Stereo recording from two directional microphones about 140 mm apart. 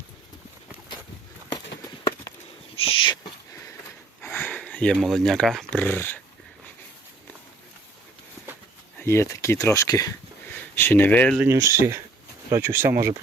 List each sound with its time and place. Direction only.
1.5 s a sound: 30° left (ahead or behind)
2.7 s owl: 40° left (ahead or behind)
4.2 s speech: 15° left (ahead or behind)
9.0 s speech: 20° left (ahead or behind)
11.4 s speech: 20° right (ahead or behind)